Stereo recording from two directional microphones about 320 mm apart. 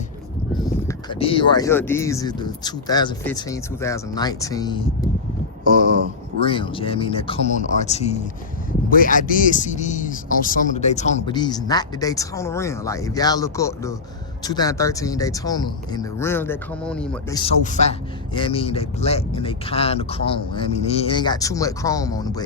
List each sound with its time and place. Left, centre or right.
0.6 s speech: centre
6.4 s speech: centre
17.4 s speech: left